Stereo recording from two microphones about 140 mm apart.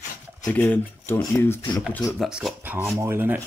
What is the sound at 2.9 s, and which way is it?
Speech, 20° right (ahead or behind).